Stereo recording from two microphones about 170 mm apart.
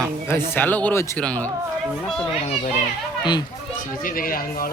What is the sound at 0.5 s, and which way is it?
Speech, 10° left (ahead or behind).